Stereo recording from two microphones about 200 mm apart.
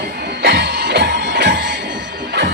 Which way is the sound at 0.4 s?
55° right (ahead or behind).